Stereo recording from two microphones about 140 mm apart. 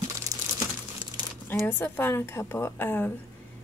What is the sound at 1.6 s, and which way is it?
A woman's voice, 15° left (ahead or behind).